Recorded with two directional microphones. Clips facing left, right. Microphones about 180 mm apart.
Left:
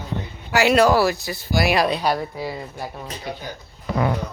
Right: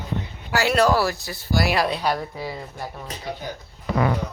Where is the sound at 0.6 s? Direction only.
15° left (ahead or behind).